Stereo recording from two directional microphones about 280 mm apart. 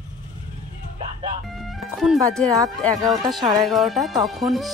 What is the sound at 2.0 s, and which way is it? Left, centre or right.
Speech, centre.